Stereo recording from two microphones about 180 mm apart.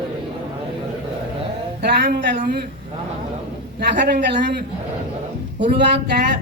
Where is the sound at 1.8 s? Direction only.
55° right (ahead or behind).